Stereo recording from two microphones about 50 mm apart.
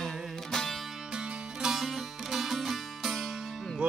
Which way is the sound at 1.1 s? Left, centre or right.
Centre.